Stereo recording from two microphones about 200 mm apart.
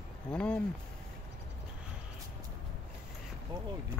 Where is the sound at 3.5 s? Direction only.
20° right (ahead or behind).